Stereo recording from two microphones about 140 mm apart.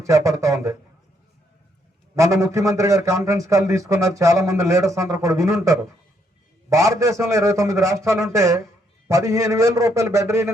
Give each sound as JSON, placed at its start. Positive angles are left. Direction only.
{"t": 0.0, "sound": "speech", "side_deg": -20}
{"t": 2.1, "sound": "speech", "side_deg": -20}